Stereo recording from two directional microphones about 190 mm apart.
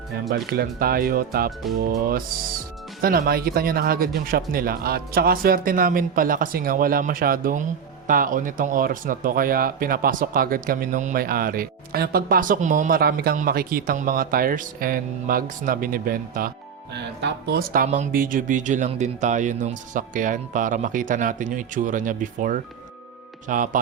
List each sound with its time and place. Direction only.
0.3 s speech: 55° right (ahead or behind)
16.9 s speech: 65° right (ahead or behind); by 23.8 s 45° right (ahead or behind)